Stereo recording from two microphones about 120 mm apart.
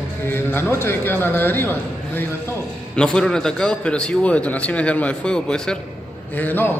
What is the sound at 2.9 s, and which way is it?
A man's voice, 5° left (ahead or behind).